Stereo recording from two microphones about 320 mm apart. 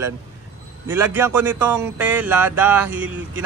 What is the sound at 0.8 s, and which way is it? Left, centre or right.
Speech, centre.